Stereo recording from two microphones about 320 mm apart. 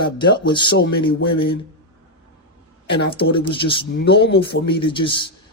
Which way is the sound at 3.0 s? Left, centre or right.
Left.